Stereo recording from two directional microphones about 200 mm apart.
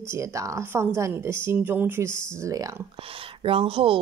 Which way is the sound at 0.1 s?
15° right (ahead or behind).